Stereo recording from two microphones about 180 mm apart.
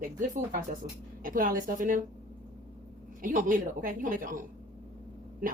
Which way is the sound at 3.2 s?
50° right (ahead or behind).